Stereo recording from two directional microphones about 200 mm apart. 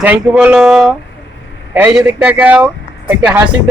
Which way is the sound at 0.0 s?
10° right (ahead or behind).